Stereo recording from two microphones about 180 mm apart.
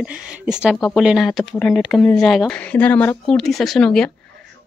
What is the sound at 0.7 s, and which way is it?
Speech, 10° left (ahead or behind).